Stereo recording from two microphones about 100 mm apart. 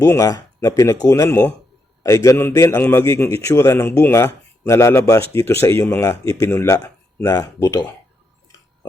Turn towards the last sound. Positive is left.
turn(degrees=25)  # may be behind; listen again after turning